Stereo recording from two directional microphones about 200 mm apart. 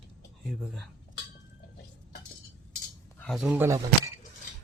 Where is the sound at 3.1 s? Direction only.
Centre (ahead or behind).